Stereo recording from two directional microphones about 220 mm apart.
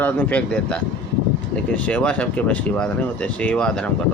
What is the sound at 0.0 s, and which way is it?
Speech, 5° left (ahead or behind).